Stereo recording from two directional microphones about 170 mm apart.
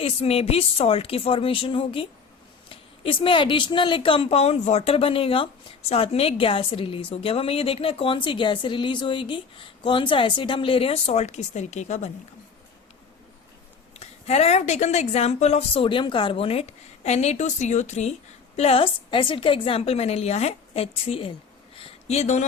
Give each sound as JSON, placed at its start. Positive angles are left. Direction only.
{"t": 0.0, "sound": "a woman's voice", "side_deg": 35}
{"t": 13.9, "sound": "a woman's voice", "side_deg": 40}
{"t": 21.8, "sound": "a sound", "side_deg": 35}